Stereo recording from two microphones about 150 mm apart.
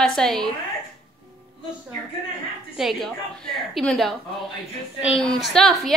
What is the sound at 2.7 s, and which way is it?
A woman's voice, centre (ahead or behind).